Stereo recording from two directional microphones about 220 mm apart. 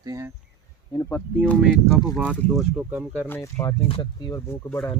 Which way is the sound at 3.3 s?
10° left (ahead or behind).